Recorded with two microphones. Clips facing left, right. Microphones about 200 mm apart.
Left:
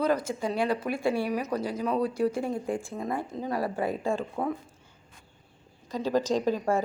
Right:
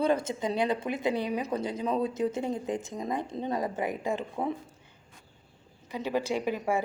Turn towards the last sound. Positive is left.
turn(degrees=-15)  # may be behind; listen again after turning